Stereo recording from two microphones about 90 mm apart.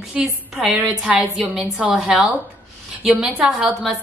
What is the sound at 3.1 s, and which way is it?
Speech, 10° right (ahead or behind).